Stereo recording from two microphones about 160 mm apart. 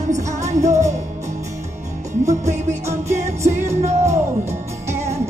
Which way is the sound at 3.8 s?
45° right (ahead or behind).